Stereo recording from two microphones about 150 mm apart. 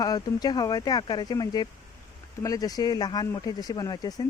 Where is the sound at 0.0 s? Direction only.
25° left (ahead or behind).